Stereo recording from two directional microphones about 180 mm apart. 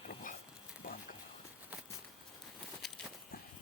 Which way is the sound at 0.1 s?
50° left (ahead or behind).